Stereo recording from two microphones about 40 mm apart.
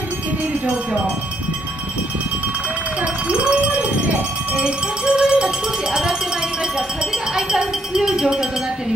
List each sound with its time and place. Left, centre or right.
3.3 s a sound: right
4.1 s music: right
7.3 s speech: centre